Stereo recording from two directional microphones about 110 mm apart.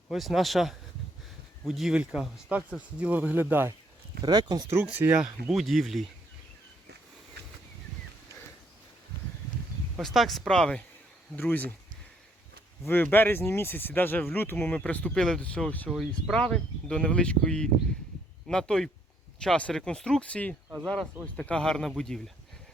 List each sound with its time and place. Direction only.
0.1 s speech: centre (ahead or behind); by 3.8 s 20° right (ahead or behind)
4.2 s speech: 35° right (ahead or behind)
4.9 s speech: 15° right (ahead or behind)
5.2 s speech: 5° right (ahead or behind)
10.0 s speech: centre (ahead or behind)
12.9 s speech: 15° left (ahead or behind)
15.9 s speech: 5° right (ahead or behind)
16.3 s speech: 10° left (ahead or behind)